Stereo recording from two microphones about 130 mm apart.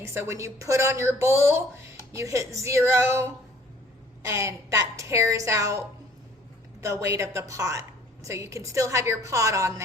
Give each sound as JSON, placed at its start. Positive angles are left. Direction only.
{"t": 0.0, "sound": "a woman's voice", "side_deg": -20}
{"t": 6.8, "sound": "a woman's voice", "side_deg": -20}